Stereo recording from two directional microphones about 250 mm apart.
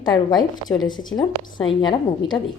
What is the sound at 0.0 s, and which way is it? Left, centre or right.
A woman's voice, centre.